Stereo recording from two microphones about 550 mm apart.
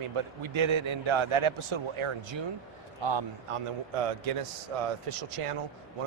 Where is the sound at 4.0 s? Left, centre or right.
Right.